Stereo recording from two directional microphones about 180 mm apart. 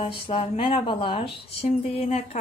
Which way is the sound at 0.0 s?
30° left (ahead or behind).